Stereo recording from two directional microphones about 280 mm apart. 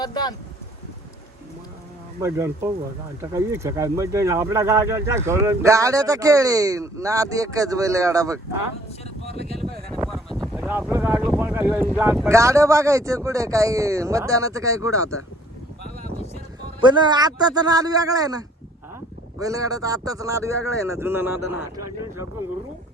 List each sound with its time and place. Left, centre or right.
0.0 s speech: centre
2.2 s speech: centre
9.2 s speech: left
9.6 s a sound: centre
10.1 s boat: centre
11.9 s speech: centre
16.8 s speech: centre